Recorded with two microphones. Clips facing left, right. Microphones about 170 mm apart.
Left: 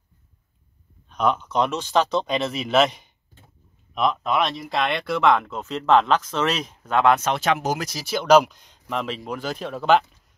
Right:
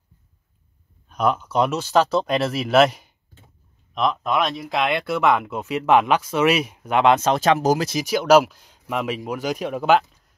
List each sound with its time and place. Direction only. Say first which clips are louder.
1.0 s speech: right 1 dB; 5° right (ahead or behind)
7.2 s speech: right 4 dB; 35° right (ahead or behind)
7.9 s speech: left 1 dB; 15° right (ahead or behind)